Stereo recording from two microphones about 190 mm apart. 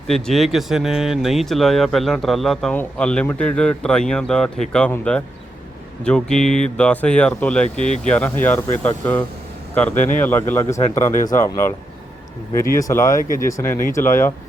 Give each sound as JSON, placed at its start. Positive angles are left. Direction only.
{"t": 0.1, "sound": "speech", "side_deg": 0}
{"t": 12.7, "sound": "speech", "side_deg": 15}